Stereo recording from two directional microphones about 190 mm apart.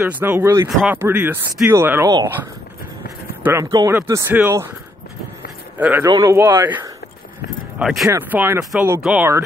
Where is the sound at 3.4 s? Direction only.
15° right (ahead or behind).